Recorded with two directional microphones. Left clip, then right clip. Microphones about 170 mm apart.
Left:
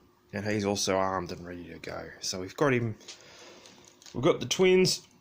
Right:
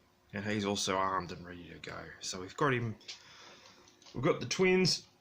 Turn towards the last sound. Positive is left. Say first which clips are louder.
# left 6 dB
turn(degrees=35)  # may be behind; listen again after turning